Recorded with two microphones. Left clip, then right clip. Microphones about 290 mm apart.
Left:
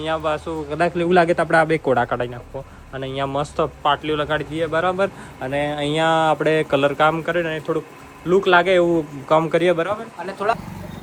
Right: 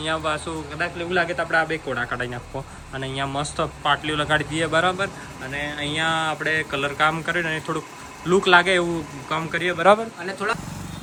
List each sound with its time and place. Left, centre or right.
0.0 s a man's voice: centre
0.8 s a man's voice: centre